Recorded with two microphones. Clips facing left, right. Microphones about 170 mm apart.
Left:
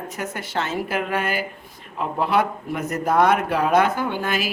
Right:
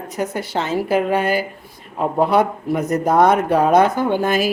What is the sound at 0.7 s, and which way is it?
Speech, 35° right (ahead or behind).